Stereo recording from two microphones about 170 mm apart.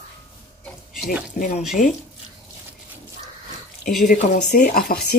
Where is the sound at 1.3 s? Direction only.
50° left (ahead or behind).